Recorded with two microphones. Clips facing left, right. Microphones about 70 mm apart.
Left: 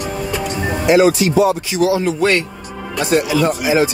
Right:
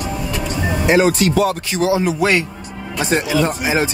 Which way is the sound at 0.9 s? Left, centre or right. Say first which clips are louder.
Left 3 dB; right.